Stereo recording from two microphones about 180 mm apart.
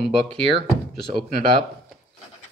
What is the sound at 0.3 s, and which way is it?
Speech, 30° right (ahead or behind).